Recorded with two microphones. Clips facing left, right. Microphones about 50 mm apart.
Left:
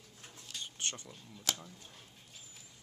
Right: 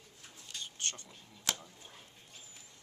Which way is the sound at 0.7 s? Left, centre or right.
Centre.